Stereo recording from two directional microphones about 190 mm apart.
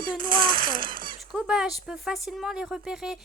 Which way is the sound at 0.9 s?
45° right (ahead or behind).